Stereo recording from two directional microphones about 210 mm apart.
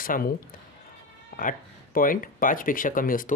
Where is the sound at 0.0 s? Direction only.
40° left (ahead or behind).